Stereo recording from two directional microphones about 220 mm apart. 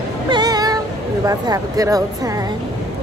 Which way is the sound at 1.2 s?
15° right (ahead or behind).